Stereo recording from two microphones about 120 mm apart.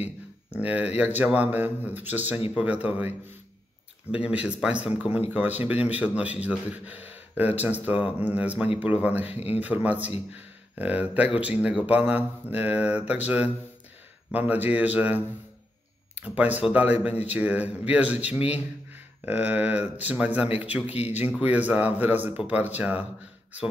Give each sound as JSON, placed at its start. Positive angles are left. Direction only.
{"t": 0.5, "sound": "speech", "side_deg": -10}
{"t": 4.1, "sound": "speech", "side_deg": -10}
{"t": 9.3, "sound": "speech", "side_deg": 60}
{"t": 9.6, "sound": "speech", "side_deg": -15}
{"t": 14.3, "sound": "speech", "side_deg": -15}